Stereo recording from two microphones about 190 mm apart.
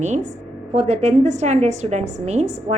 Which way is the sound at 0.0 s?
40° right (ahead or behind).